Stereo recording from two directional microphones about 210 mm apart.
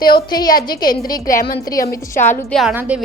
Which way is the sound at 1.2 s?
40° left (ahead or behind).